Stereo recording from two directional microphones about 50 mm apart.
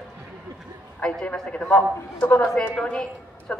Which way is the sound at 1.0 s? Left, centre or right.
Centre.